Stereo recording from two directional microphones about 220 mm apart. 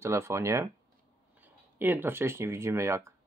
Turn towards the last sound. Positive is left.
turn(degrees=-15)  # may be behind; listen again after turning